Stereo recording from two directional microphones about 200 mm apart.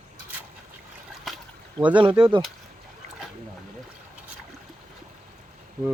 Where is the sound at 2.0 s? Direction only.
25° right (ahead or behind).